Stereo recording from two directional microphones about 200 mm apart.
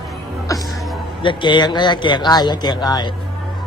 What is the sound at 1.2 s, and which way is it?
Speech, 25° left (ahead or behind).